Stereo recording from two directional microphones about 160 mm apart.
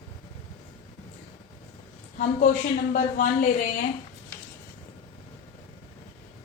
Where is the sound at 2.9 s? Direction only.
55° left (ahead or behind).